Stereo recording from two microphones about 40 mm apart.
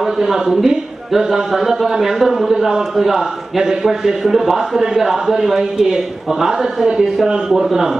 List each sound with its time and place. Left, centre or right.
0.0 s a man's voice: centre
5.6 s a man's voice: centre